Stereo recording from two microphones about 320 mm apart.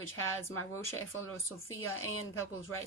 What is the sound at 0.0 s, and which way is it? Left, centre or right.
Speech, left.